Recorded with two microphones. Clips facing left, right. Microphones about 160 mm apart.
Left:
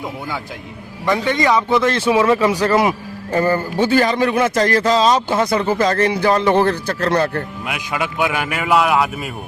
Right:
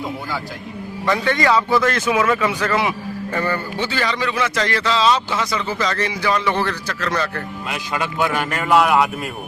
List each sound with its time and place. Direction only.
1.0 s a man's voice: 20° left (ahead or behind); by 6.7 s 50° left (ahead or behind)
7.7 s a man's voice: 10° left (ahead or behind)